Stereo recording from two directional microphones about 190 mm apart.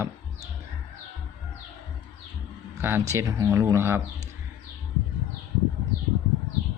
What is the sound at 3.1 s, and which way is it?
Speech, 15° right (ahead or behind).